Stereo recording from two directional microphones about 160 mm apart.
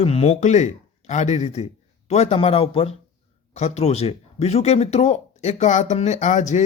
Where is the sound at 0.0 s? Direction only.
40° left (ahead or behind).